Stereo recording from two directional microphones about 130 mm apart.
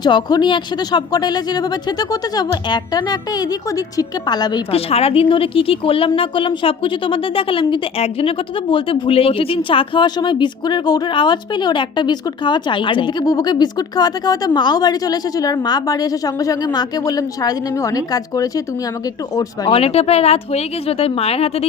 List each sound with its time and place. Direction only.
0.0 s a woman's voice: 35° left (ahead or behind)
4.7 s a woman's voice: 50° left (ahead or behind); by 19.7 s 25° left (ahead or behind)
19.7 s speech: 50° left (ahead or behind)